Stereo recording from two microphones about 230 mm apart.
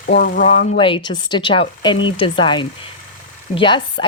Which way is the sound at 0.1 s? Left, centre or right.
Left.